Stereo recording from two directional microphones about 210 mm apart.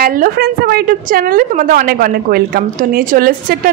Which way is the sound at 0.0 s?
45° right (ahead or behind).